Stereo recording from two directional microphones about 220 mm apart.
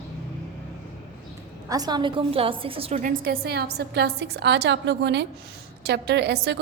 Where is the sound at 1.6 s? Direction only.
15° right (ahead or behind).